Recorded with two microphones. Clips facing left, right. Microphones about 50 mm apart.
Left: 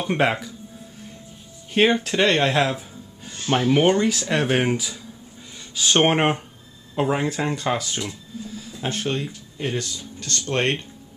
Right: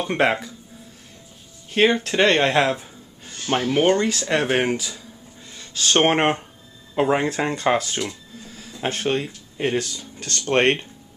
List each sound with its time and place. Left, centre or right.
0.0 s speech: centre
1.8 s speech: centre
3.6 s speech: centre
4.0 s speech: centre
7.0 s speech: centre
8.8 s speech: centre
9.1 s speech: right